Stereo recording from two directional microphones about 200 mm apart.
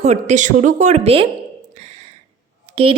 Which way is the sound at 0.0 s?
35° right (ahead or behind).